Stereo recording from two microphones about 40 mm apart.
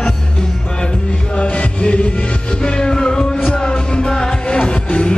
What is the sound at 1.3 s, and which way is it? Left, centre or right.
Music, left.